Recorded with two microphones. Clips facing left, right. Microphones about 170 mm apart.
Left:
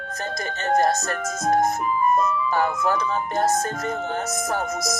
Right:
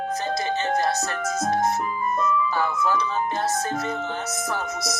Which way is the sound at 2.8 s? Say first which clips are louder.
Left 1 dB; 50° left (ahead or behind).